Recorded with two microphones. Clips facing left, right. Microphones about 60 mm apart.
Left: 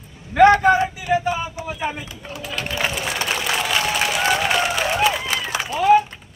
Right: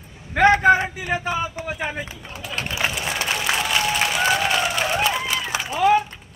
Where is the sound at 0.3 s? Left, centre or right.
Right.